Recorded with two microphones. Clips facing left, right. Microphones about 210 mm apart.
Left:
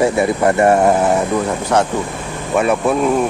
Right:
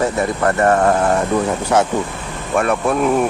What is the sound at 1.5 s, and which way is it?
Speech, 5° right (ahead or behind).